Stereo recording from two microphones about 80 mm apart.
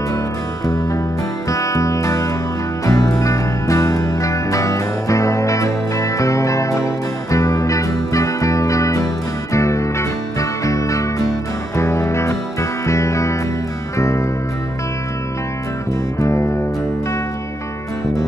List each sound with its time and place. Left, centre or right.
0.7 s music: left
16.2 s music: left